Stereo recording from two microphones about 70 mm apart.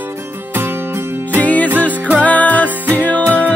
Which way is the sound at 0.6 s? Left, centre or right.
Right.